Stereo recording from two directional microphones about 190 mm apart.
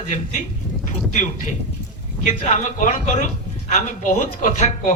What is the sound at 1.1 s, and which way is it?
A man's voice, 40° left (ahead or behind).